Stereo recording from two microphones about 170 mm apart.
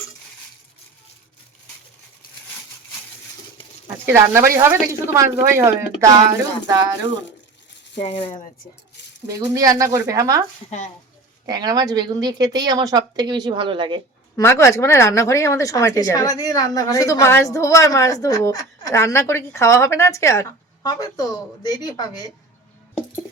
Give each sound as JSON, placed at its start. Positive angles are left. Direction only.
{"t": 4.0, "sound": "a woman's voice", "side_deg": -15}
{"t": 7.9, "sound": "speech", "side_deg": 35}
{"t": 9.6, "sound": "a woman's voice", "side_deg": -20}
{"t": 11.4, "sound": "a woman's voice", "side_deg": -25}
{"t": 14.3, "sound": "a woman's voice", "side_deg": 15}